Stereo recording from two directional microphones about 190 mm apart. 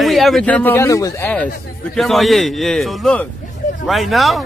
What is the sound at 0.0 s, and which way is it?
Speech, centre (ahead or behind).